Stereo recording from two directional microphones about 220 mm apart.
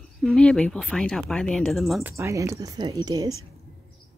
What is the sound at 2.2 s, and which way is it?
Speech, 10° right (ahead or behind).